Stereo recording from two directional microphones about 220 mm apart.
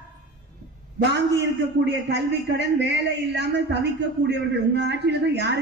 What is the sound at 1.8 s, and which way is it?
A man's voice, 50° right (ahead or behind).